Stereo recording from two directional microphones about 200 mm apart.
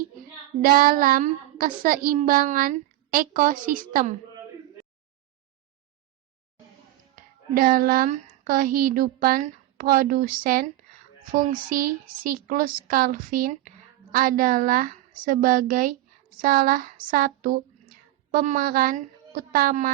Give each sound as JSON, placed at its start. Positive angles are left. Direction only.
{"t": 0.6, "sound": "a woman's voice", "side_deg": -45}
{"t": 7.2, "sound": "speech", "side_deg": -45}